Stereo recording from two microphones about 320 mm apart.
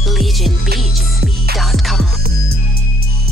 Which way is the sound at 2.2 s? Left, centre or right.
Right.